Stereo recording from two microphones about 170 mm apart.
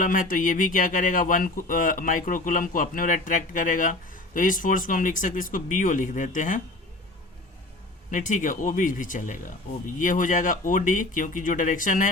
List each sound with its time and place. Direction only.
0.0 s speech: 50° left (ahead or behind)
8.1 s speech: 50° left (ahead or behind)